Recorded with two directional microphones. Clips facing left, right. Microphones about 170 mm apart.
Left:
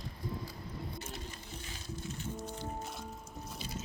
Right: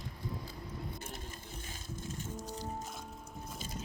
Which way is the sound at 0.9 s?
50° right (ahead or behind).